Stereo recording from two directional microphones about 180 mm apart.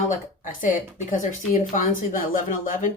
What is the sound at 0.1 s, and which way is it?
Speech, 45° left (ahead or behind).